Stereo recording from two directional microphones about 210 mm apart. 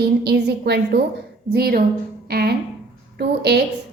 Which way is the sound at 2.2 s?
50° right (ahead or behind).